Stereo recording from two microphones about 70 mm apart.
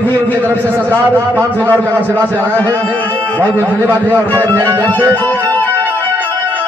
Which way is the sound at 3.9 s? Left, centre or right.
Right.